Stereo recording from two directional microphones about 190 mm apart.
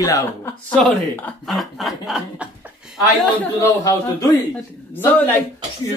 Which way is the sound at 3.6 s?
20° left (ahead or behind).